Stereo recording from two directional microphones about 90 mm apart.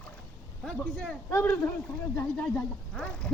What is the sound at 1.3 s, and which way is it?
Speech, 30° left (ahead or behind).